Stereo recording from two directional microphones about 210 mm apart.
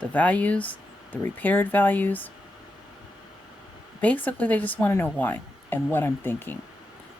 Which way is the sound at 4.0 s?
5° left (ahead or behind).